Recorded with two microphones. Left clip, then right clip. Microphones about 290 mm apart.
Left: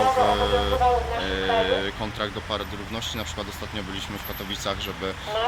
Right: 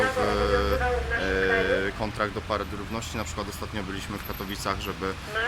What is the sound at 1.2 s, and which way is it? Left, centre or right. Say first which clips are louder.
Speech: left 1 dB; centre.